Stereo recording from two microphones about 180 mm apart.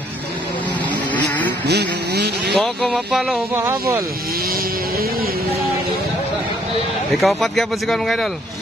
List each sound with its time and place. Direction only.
1.7 s speech: 65° right (ahead or behind)
2.5 s speech: centre (ahead or behind)
3.5 s speech: 15° right (ahead or behind)
7.2 s speech: centre (ahead or behind)